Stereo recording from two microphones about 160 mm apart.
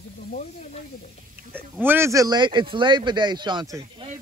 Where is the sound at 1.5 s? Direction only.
15° right (ahead or behind).